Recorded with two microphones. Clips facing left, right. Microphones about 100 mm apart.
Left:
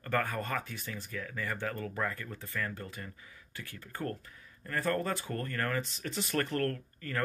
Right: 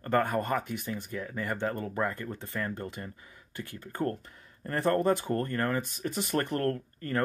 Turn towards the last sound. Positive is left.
turn(degrees=-30)  # may be behind; listen again after turning